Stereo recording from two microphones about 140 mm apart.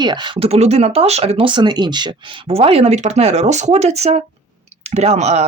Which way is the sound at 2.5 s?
45° right (ahead or behind).